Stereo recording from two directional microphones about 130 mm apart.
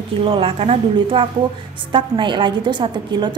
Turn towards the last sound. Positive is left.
turn(degrees=-35)  # may be behind; listen again after turning